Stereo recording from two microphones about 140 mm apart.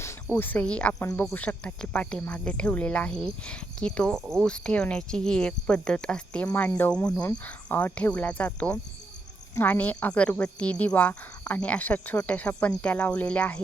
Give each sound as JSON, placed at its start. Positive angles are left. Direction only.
{"t": 0.0, "sound": "speech", "side_deg": 15}